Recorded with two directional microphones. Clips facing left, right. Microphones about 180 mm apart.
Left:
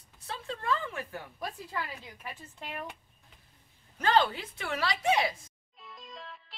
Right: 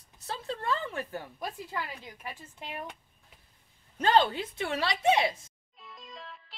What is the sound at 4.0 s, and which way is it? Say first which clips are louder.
A woman's voice: right 2 dB; 25° right (ahead or behind).